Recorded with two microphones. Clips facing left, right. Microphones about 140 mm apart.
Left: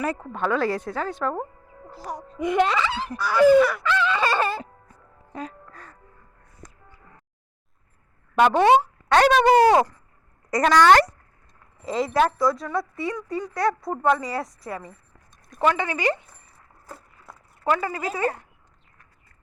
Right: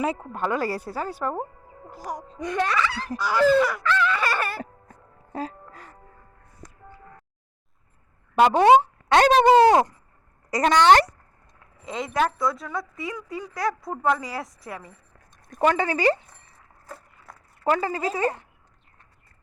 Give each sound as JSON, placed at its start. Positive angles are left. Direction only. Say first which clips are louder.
{"t": 0.2, "sound": "speech", "louder": "left 2 dB", "side_deg": -10}
{"t": 2.4, "sound": "speech", "louder": "left 4 dB", "side_deg": 20}
{"t": 3.2, "sound": "speech", "louder": "left 4 dB", "side_deg": -20}
{"t": 3.8, "sound": "a sound", "louder": "left 1 dB", "side_deg": 20}
{"t": 5.3, "sound": "music", "louder": "right 3 dB", "side_deg": -30}
{"t": 8.4, "sound": "speech", "louder": "right 2 dB", "side_deg": -20}
{"t": 11.9, "sound": "speech", "louder": "left 3 dB", "side_deg": 0}
{"t": 15.6, "sound": "speech", "louder": "right 2 dB", "side_deg": -35}
{"t": 17.7, "sound": "speech", "louder": "right 1 dB", "side_deg": -30}